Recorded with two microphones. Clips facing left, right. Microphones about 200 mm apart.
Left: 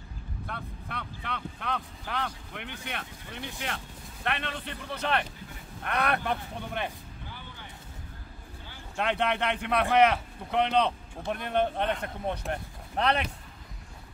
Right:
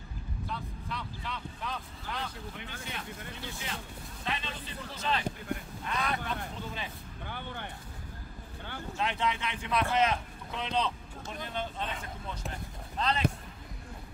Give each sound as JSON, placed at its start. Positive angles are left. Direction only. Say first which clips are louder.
{"t": 0.5, "sound": "speech", "louder": "even", "side_deg": 60}
{"t": 7.2, "sound": "vehicle", "louder": "right 8 dB", "side_deg": -60}
{"t": 8.9, "sound": "speech", "louder": "left 4 dB", "side_deg": 65}